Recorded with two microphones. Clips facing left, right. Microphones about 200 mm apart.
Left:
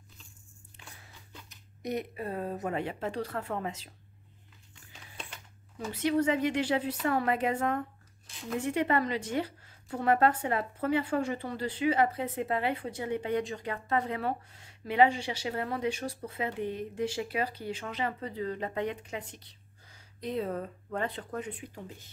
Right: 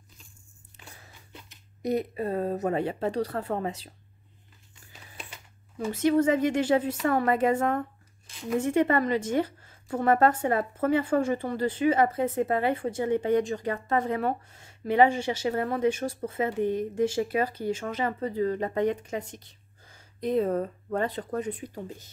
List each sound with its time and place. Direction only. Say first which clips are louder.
1.3 s speech: right 3 dB; 35° right (ahead or behind)
5.9 s a woman's voice: right 5 dB; 45° right (ahead or behind)